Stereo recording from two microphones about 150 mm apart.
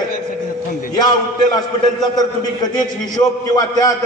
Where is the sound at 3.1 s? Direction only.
25° left (ahead or behind).